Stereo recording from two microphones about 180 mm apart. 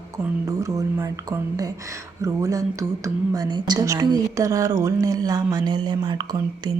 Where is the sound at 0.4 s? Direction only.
20° right (ahead or behind).